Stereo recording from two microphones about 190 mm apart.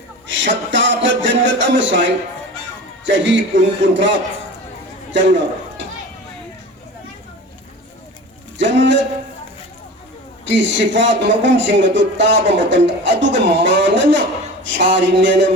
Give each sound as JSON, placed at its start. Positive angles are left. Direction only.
{"t": 0.3, "sound": "a man's voice", "side_deg": -70}
{"t": 8.5, "sound": "speech", "side_deg": -70}
{"t": 10.4, "sound": "a man's voice", "side_deg": -70}